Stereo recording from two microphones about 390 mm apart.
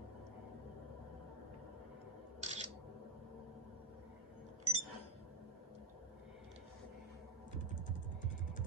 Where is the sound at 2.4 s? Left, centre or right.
Centre.